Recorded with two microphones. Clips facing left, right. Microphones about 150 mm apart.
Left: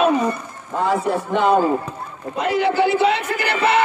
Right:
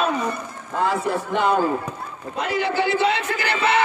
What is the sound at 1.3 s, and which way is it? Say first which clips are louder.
A man's voice: left 4 dB; 5° left (ahead or behind).